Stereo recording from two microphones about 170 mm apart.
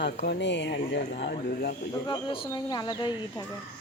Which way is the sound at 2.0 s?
25° left (ahead or behind).